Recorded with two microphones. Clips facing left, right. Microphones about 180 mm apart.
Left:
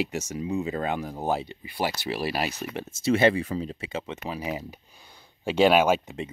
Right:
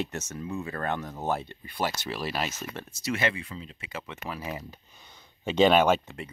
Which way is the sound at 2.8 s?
25° left (ahead or behind).